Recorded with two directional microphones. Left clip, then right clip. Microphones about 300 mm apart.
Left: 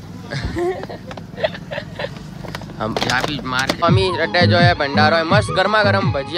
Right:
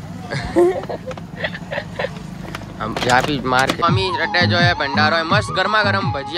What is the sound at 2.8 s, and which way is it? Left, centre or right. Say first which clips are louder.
Speech: right 3 dB; centre.